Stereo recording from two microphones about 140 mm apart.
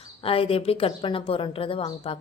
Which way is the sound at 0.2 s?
40° left (ahead or behind).